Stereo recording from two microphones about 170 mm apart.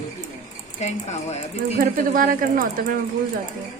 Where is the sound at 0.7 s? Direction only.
40° left (ahead or behind).